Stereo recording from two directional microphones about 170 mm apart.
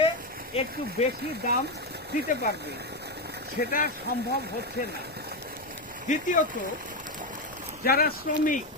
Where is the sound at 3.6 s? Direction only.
55° left (ahead or behind).